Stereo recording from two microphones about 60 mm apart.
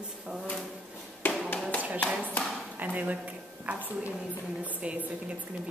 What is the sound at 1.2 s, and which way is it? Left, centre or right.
Tap, left.